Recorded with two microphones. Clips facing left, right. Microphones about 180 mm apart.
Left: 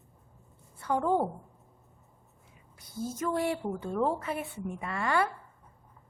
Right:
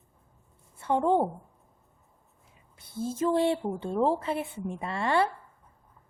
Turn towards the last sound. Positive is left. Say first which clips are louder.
# right 3 dB
turn(degrees=-30)  # may be behind; listen again after turning